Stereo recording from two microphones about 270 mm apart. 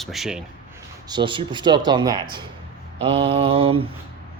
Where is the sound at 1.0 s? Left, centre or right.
Centre.